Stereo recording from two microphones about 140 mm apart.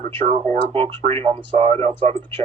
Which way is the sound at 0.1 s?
40° right (ahead or behind).